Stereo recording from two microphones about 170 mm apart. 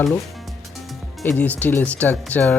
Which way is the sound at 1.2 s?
10° left (ahead or behind).